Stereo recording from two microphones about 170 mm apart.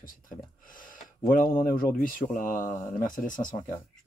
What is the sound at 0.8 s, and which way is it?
Speech, 55° left (ahead or behind).